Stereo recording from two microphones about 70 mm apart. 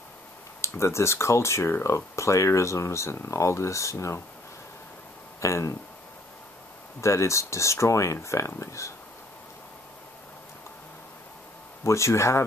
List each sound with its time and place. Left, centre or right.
0.6 s speech: left
5.4 s speech: left
7.0 s speech: left
11.8 s speech: left